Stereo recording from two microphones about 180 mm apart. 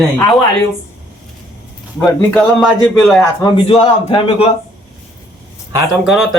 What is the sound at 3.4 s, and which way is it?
Speech, 30° left (ahead or behind).